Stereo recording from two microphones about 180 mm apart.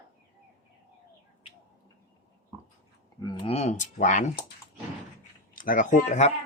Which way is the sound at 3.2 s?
25° left (ahead or behind).